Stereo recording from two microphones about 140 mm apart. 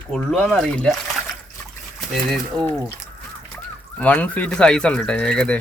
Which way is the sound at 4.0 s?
10° left (ahead or behind).